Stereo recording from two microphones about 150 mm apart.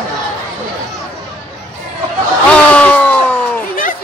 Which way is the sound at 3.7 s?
65° left (ahead or behind).